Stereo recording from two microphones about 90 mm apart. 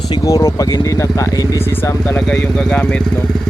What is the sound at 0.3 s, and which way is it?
Speech, 40° left (ahead or behind).